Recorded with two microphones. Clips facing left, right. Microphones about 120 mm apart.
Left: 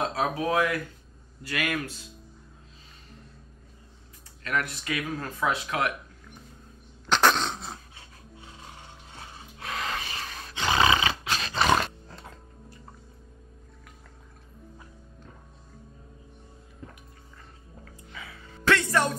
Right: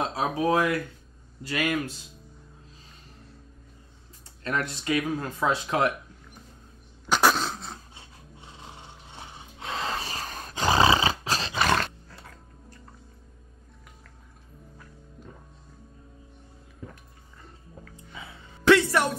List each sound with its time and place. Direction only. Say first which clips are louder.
0.1 s speech: right 2 dB; 25° right (ahead or behind)
4.4 s speech: right 1 dB; 30° right (ahead or behind)
5.1 s speech: right 2 dB; 20° right (ahead or behind)
5.5 s speech: right 4 dB; 30° right (ahead or behind)
7.1 s dog: even; 10° right (ahead or behind)
9.1 s roar: right 1 dB; 25° right (ahead or behind)
11.5 s roar: left 2 dB; 5° left (ahead or behind)
17.9 s a sound: even; 25° right (ahead or behind)